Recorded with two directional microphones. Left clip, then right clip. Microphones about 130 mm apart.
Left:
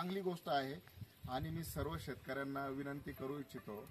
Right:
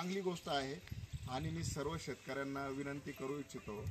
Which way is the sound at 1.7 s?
10° left (ahead or behind).